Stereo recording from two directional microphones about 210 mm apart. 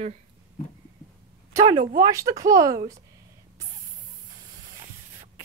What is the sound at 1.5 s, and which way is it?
Speech, 20° right (ahead or behind).